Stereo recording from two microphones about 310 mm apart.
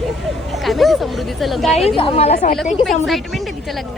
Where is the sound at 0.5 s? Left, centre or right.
Centre.